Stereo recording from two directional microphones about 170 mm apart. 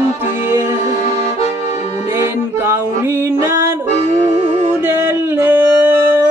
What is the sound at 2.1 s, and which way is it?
Music, 15° right (ahead or behind).